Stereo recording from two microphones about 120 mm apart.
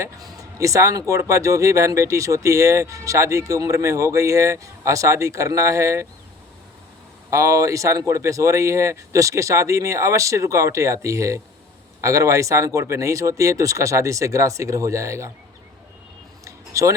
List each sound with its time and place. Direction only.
0.0 s speech: 30° right (ahead or behind)
7.3 s speech: 25° right (ahead or behind)
16.4 s a sound: 25° right (ahead or behind)